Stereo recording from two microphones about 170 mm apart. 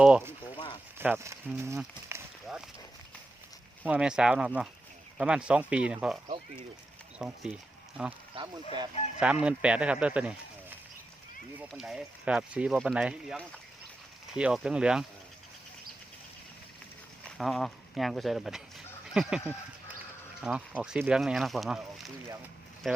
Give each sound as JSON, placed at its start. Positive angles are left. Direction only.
{"t": 0.0, "sound": "speech", "side_deg": -10}
{"t": 2.1, "sound": "a sound", "side_deg": -15}
{"t": 3.8, "sound": "speech", "side_deg": -5}
{"t": 7.2, "sound": "speech", "side_deg": -5}
{"t": 8.4, "sound": "speech", "side_deg": -30}
{"t": 9.2, "sound": "speech", "side_deg": -5}
{"t": 17.2, "sound": "speech", "side_deg": 0}
{"t": 22.8, "sound": "speech", "side_deg": 0}